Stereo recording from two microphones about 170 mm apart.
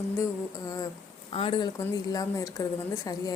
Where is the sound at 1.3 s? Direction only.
35° left (ahead or behind).